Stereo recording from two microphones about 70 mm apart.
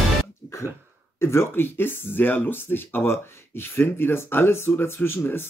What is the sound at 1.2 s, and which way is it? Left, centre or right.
Speech, left.